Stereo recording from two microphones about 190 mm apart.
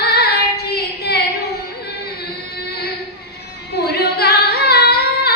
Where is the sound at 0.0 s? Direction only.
55° left (ahead or behind).